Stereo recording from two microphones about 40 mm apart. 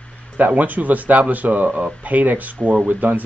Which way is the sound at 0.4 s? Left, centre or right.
Right.